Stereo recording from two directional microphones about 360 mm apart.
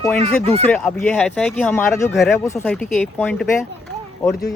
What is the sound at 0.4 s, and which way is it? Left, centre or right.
Speech, centre.